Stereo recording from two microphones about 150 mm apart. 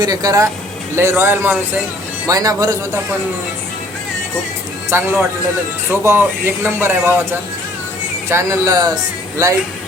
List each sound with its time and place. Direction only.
0.0 s a man's voice: 25° right (ahead or behind)
4.9 s a man's voice: 15° right (ahead or behind)